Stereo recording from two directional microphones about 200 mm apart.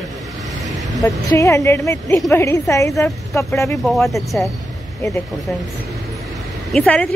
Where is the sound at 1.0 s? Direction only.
15° left (ahead or behind).